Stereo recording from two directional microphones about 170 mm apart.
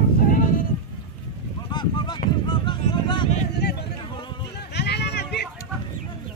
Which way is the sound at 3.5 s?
75° left (ahead or behind).